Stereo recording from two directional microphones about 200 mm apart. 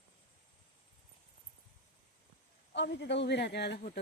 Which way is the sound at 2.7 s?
60° left (ahead or behind).